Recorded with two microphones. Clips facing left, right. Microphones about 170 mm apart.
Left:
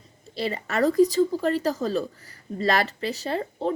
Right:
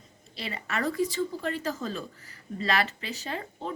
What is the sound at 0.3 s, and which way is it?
Speech, 40° left (ahead or behind).